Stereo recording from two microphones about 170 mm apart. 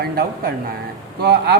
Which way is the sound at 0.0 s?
65° right (ahead or behind).